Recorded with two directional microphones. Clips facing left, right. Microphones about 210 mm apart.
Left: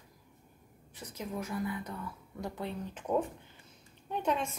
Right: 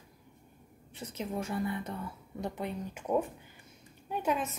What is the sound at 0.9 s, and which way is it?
A woman's voice, 25° right (ahead or behind).